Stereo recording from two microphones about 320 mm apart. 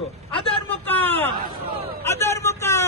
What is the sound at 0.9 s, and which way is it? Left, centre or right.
A man's voice, centre.